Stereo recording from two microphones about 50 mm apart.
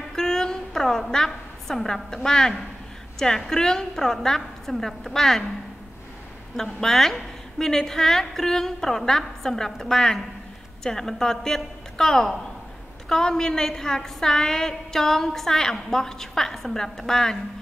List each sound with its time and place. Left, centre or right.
0.1 s a sound: centre
2.2 s a woman's voice: centre
6.5 s a woman's voice: centre